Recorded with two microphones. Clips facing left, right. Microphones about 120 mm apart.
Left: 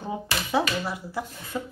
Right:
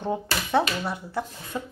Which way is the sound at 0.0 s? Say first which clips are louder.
Right 3 dB; 5° left (ahead or behind).